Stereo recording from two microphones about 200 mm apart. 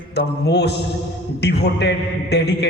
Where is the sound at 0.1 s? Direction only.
55° left (ahead or behind).